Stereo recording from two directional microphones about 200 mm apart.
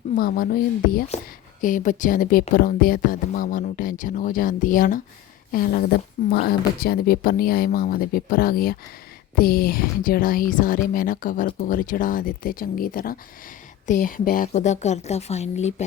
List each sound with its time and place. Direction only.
0.2 s a woman's voice: 45° left (ahead or behind)